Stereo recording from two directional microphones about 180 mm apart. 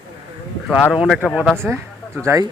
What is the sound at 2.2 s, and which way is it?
Speech, 15° right (ahead or behind).